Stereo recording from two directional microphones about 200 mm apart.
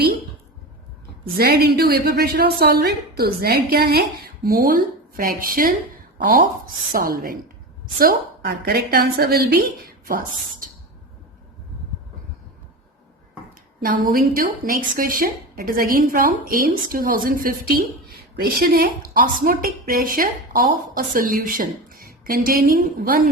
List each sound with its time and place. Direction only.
1.4 s speech: 50° right (ahead or behind)
13.8 s speech: 45° right (ahead or behind)